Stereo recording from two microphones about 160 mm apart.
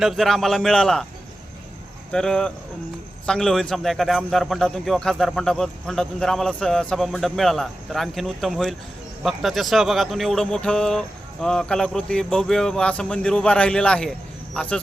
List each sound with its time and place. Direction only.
0.0 s a man's voice: centre (ahead or behind)
2.1 s a man's voice: 5° left (ahead or behind)